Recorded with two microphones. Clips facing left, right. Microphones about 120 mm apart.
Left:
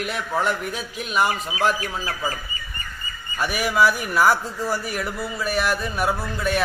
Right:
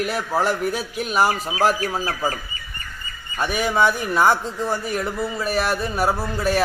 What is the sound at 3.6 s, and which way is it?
A man's voice, 25° right (ahead or behind).